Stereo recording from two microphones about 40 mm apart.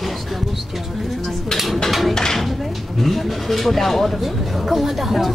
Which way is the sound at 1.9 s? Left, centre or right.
Centre.